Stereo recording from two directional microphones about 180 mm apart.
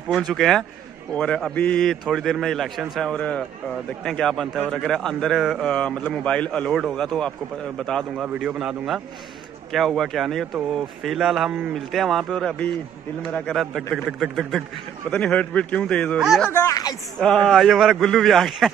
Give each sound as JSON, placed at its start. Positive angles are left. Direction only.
{"t": 0.3, "sound": "a man's voice", "side_deg": 0}
{"t": 16.5, "sound": "a man's voice", "side_deg": 20}
{"t": 17.2, "sound": "a man's voice", "side_deg": 5}